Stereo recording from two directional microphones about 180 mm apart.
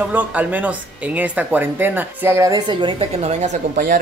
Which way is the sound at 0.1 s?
10° right (ahead or behind).